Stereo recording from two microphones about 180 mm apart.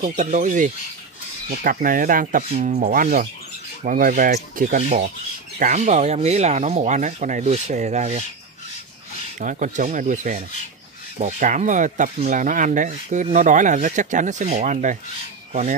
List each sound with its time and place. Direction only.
0.0 s speech: 45° right (ahead or behind)
9.4 s speech: 45° right (ahead or behind)